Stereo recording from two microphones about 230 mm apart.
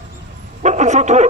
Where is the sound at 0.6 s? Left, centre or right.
Right.